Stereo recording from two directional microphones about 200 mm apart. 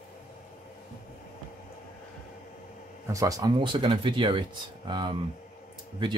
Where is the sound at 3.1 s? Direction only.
15° right (ahead or behind).